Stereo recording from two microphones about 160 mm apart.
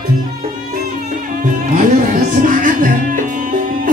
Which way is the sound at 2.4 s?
55° right (ahead or behind).